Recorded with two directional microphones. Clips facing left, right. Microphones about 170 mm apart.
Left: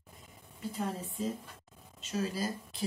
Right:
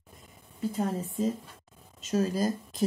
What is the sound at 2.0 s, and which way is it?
Speech, 45° right (ahead or behind).